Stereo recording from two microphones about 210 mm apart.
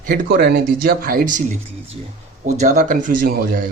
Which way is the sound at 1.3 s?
35° right (ahead or behind).